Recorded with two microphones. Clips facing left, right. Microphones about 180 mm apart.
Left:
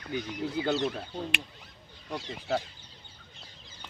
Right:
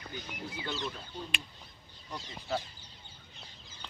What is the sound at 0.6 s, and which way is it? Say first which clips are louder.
Speech: left 9 dB; 70° left (ahead or behind).